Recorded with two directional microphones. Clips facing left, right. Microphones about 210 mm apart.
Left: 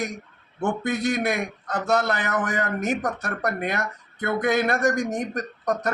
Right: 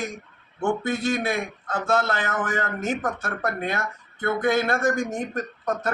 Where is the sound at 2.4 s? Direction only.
15° left (ahead or behind).